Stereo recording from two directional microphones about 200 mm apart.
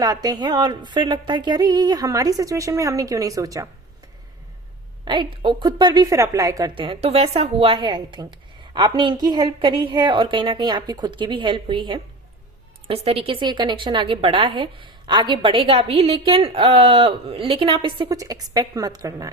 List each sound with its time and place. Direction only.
0.0 s a woman's voice: 20° right (ahead or behind)
5.0 s a woman's voice: 25° right (ahead or behind)